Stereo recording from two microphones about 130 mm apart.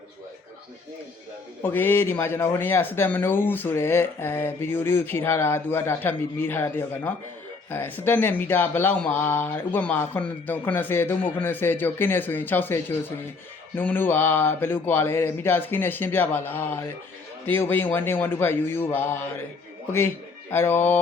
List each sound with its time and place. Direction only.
1.6 s speech: 15° left (ahead or behind)
20.5 s speech: 15° left (ahead or behind)